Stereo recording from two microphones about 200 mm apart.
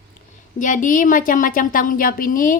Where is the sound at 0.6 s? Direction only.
40° left (ahead or behind).